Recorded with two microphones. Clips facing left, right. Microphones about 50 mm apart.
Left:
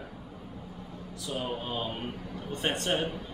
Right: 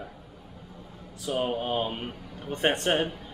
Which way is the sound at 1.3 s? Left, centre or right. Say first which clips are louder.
Right 6 dB; right.